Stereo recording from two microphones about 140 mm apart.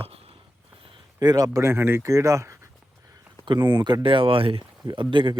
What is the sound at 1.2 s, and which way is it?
Speech, 25° right (ahead or behind).